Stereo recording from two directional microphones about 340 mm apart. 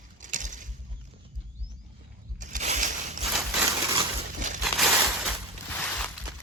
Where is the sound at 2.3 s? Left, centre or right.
Right.